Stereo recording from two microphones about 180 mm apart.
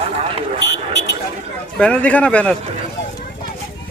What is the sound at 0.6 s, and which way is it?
Vehicle, 70° left (ahead or behind).